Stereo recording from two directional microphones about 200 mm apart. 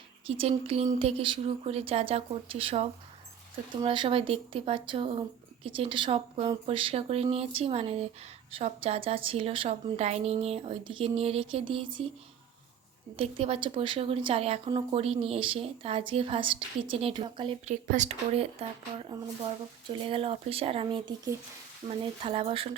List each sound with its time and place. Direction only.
0.3 s a woman's voice: 30° right (ahead or behind)
13.1 s a woman's voice: 30° right (ahead or behind)